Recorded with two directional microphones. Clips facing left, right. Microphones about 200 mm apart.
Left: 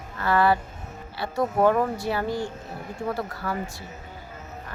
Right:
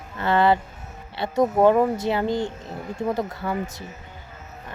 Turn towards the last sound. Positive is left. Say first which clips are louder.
# right 4 dB
turn(degrees=-20)  # may be behind; listen again after turning